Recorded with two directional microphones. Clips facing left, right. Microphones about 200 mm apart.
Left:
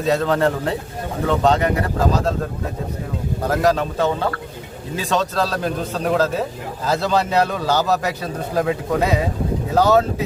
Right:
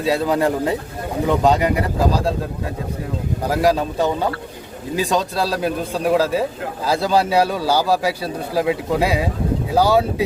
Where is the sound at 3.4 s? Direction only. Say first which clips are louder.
Even; 10° right (ahead or behind).